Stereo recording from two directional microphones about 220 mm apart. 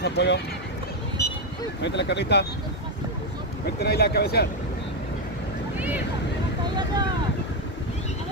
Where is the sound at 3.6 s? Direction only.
45° left (ahead or behind).